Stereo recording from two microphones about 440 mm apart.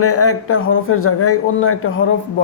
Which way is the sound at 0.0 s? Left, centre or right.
Left.